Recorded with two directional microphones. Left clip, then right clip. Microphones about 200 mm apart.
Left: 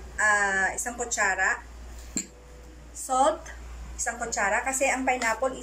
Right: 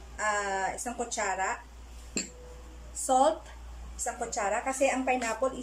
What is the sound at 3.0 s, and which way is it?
Speech, 15° right (ahead or behind).